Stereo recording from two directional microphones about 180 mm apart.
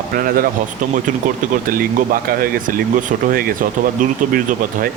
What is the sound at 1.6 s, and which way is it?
Speech, 50° right (ahead or behind).